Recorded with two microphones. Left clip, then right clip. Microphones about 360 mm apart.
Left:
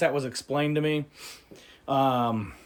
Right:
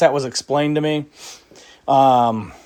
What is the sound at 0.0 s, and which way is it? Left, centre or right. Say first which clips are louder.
Speech: right 10 dB; centre.